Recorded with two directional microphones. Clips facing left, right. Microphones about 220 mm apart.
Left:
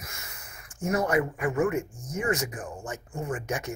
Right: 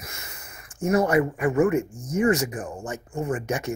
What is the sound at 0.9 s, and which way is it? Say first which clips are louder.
Speech: right 5 dB; 30° right (ahead or behind).